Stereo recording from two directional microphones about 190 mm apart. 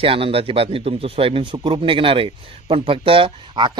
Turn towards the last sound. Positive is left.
turn(degrees=-25)  # may be behind; listen again after turning